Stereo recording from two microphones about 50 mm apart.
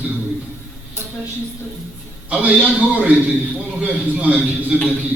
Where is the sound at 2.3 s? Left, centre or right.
Right.